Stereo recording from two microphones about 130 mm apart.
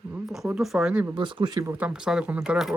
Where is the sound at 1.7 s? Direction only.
10° right (ahead or behind).